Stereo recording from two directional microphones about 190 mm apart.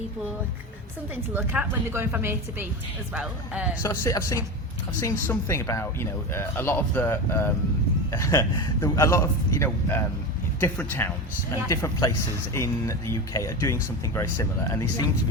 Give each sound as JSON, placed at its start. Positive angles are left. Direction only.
{"t": 1.1, "sound": "a woman's voice", "side_deg": -10}
{"t": 3.8, "sound": "speech", "side_deg": 15}